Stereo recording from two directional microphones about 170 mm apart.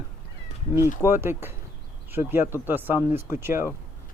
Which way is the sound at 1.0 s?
15° right (ahead or behind).